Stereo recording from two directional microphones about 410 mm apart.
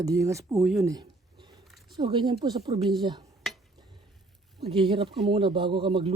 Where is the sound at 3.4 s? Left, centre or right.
Centre.